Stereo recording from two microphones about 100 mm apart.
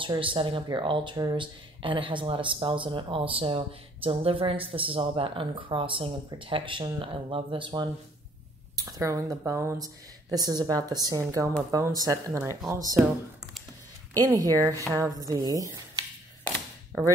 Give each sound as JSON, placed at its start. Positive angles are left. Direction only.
{"t": 0.0, "sound": "speech", "side_deg": -60}
{"t": 1.1, "sound": "a woman's voice", "side_deg": -40}
{"t": 1.4, "sound": "speech", "side_deg": -60}
{"t": 8.7, "sound": "speech", "side_deg": -40}
{"t": 10.3, "sound": "a woman's voice", "side_deg": -40}
{"t": 14.2, "sound": "a woman's voice", "side_deg": -35}